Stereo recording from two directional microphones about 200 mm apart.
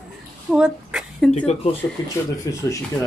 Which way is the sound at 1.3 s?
30° left (ahead or behind).